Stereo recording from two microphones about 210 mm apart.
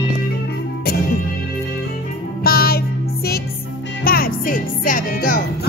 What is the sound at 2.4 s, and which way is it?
Music, 45° left (ahead or behind).